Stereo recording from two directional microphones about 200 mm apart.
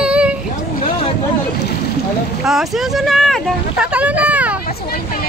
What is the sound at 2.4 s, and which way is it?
Speech, centre (ahead or behind).